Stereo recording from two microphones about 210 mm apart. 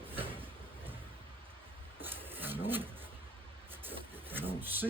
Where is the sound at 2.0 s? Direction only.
10° right (ahead or behind).